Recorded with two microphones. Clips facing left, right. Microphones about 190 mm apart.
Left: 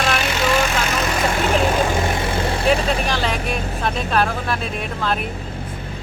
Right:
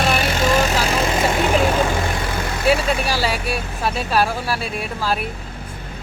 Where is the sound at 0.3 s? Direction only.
40° right (ahead or behind).